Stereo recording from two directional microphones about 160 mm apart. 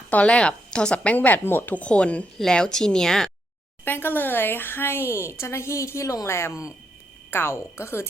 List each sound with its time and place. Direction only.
0.1 s speech: 10° left (ahead or behind)